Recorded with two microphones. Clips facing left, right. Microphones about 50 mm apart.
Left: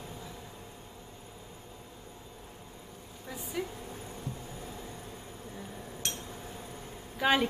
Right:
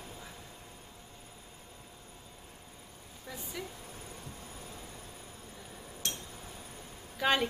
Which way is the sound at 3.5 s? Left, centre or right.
Centre.